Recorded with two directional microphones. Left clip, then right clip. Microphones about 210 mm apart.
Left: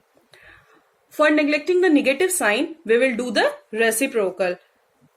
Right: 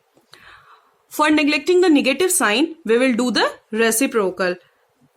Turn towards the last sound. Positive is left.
turn(degrees=-55)  # may be behind; listen again after turning